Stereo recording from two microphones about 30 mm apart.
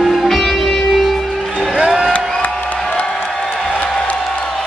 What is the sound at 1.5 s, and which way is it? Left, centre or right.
Music, right.